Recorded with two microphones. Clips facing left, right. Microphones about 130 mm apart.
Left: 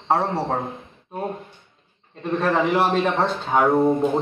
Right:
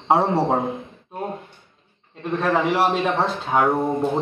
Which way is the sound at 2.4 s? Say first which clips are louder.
Even; centre (ahead or behind).